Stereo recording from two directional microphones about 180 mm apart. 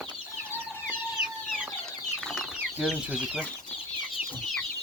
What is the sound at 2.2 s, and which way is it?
Chicken, 5° left (ahead or behind).